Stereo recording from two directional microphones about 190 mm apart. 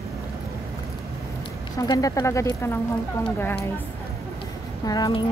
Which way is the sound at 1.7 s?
20° left (ahead or behind).